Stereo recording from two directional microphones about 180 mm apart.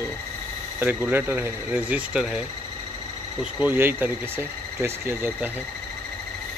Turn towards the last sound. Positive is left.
turn(degrees=-15)  # may be behind; listen again after turning